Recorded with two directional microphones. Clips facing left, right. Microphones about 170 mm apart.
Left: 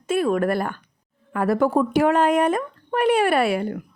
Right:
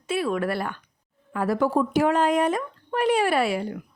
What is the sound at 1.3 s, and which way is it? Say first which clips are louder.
A woman's voice: left 3 dB; 55° left (ahead or behind).